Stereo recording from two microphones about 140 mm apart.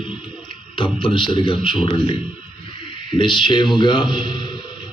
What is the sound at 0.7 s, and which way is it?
A man's voice, 40° left (ahead or behind).